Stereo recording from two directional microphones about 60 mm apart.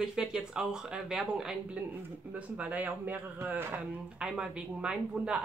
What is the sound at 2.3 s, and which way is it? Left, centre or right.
A man's voice, right.